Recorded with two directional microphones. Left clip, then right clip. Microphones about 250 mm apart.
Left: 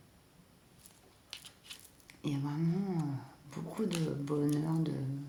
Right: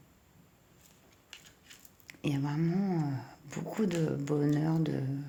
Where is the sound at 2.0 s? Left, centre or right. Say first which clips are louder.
Right 4 dB; right.